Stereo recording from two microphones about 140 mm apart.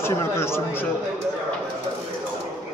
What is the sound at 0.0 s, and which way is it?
Speech, 15° left (ahead or behind).